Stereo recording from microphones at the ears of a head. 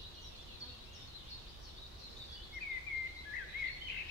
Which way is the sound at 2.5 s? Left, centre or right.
Left.